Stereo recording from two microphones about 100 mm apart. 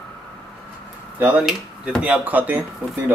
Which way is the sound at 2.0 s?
15° right (ahead or behind).